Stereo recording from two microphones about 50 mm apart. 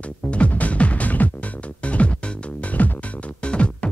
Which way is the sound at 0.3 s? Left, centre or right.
Left.